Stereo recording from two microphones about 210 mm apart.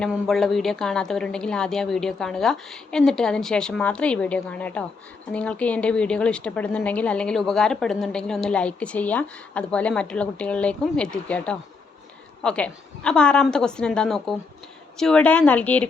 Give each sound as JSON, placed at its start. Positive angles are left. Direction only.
{"t": 0.0, "sound": "a woman's voice", "side_deg": 0}